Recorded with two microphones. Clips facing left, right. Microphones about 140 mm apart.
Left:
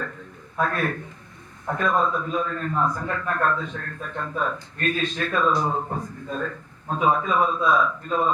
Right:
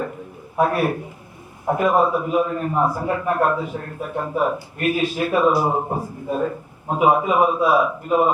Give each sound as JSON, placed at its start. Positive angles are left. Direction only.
{"t": 0.0, "sound": "speech", "side_deg": -15}
{"t": 5.8, "sound": "a man's voice", "side_deg": -30}
{"t": 6.1, "sound": "speech", "side_deg": -10}